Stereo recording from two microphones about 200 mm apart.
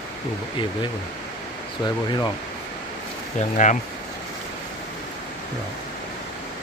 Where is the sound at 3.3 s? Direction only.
40° left (ahead or behind).